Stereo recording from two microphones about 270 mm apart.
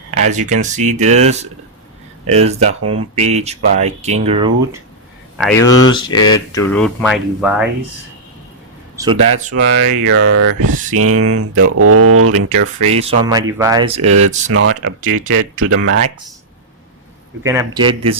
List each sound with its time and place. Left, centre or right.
0.2 s speech: right
5.4 s speech: centre
5.8 s speech: centre
6.7 s speech: centre
9.0 s speech: centre
9.5 s speech: right
12.5 s speech: right
14.0 s speech: right
17.4 s speech: centre